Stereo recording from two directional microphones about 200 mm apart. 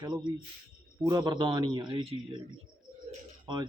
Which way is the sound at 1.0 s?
20° right (ahead or behind).